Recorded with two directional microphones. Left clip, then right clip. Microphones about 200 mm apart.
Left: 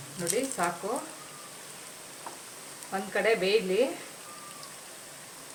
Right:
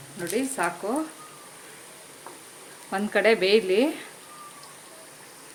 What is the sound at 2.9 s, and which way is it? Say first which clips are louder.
Speech: right 5 dB; 55° right (ahead or behind).